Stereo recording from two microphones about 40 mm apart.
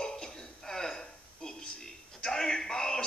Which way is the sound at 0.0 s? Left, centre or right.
Centre.